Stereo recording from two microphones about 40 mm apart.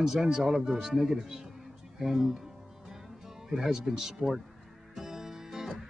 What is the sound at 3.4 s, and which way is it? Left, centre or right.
Speech, centre.